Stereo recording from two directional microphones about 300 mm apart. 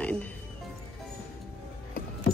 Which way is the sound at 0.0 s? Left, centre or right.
Centre.